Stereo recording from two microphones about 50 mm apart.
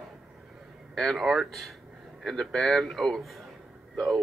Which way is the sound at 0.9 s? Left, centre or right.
Centre.